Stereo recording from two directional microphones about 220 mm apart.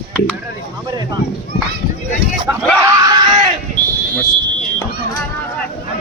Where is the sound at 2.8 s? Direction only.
15° right (ahead or behind).